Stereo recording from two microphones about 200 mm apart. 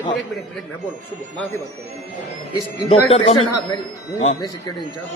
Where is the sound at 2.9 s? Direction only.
30° left (ahead or behind).